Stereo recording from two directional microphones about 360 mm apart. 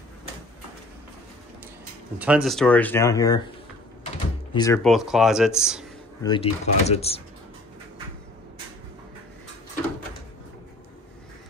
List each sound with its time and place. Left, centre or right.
2.1 s speech: centre
4.6 s speech: centre
6.2 s speech: centre